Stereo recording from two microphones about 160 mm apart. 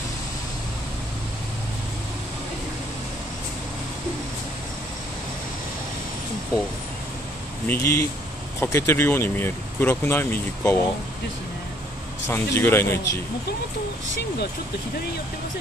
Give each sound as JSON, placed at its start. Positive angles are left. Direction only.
{"t": 7.6, "sound": "speech", "side_deg": 15}
{"t": 12.3, "sound": "speech", "side_deg": 15}